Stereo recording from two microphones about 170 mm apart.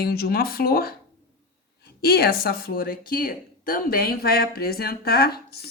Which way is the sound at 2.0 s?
65° left (ahead or behind).